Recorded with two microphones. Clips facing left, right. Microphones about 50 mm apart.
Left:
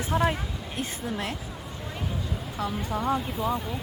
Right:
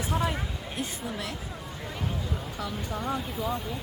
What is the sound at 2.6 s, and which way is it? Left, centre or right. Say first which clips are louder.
Speech: left 6 dB; left.